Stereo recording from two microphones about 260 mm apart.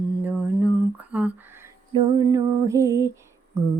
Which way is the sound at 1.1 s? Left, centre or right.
Centre.